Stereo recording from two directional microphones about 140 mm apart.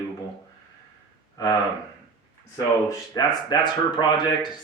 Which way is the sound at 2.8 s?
25° left (ahead or behind).